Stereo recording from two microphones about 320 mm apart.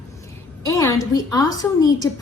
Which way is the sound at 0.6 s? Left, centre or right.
Centre.